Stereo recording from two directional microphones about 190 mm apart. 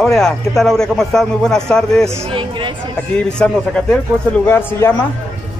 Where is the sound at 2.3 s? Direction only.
25° right (ahead or behind).